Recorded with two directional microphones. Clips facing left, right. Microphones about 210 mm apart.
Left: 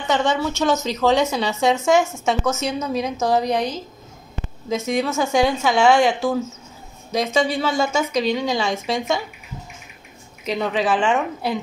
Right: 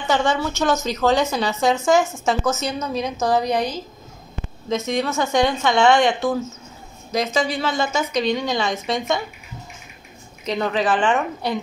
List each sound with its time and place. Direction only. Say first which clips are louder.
0.0 s a woman's voice: even; centre (ahead or behind)
10.4 s a woman's voice: even; centre (ahead or behind)